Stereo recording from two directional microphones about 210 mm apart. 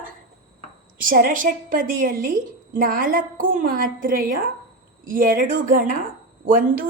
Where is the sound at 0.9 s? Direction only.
40° right (ahead or behind).